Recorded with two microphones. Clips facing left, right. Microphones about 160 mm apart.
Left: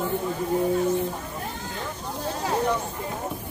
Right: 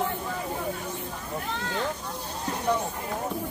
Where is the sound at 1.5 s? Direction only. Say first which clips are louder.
Right 3 dB; 75° right (ahead or behind).